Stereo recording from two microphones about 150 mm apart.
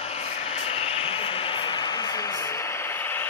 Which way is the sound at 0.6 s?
40° left (ahead or behind).